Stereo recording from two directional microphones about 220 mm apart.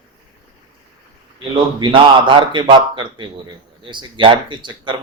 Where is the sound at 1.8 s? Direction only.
20° right (ahead or behind).